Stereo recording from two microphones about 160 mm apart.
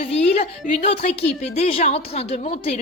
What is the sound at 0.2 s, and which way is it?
A woman's voice, 40° left (ahead or behind).